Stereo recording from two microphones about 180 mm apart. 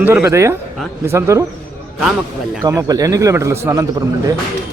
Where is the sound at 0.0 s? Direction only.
15° right (ahead or behind).